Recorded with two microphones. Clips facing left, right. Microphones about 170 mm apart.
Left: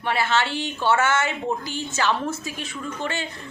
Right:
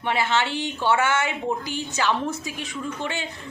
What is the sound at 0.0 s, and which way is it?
A woman's voice, 20° right (ahead or behind).